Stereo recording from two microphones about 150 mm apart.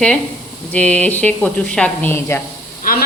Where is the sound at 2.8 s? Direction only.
70° left (ahead or behind).